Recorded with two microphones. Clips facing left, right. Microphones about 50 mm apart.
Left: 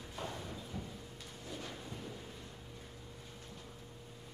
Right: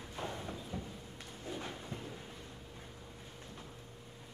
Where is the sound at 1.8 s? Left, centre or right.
Right.